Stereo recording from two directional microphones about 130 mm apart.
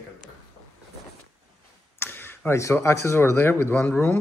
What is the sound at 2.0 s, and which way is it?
Speech, 15° left (ahead or behind).